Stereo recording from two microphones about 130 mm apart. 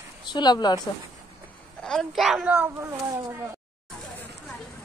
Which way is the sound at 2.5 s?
15° right (ahead or behind).